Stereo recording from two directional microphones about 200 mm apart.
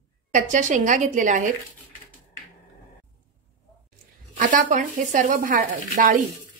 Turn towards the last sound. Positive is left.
turn(degrees=-40)  # may be behind; listen again after turning